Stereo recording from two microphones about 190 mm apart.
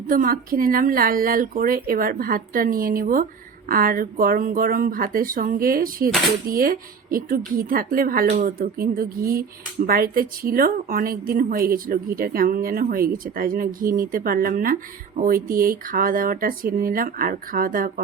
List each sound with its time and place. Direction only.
0.1 s speech: 45° right (ahead or behind)